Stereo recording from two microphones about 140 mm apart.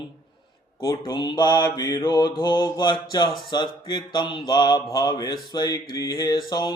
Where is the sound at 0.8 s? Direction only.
25° left (ahead or behind).